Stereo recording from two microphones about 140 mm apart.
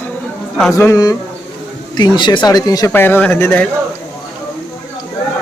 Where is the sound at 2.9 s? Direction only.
15° left (ahead or behind).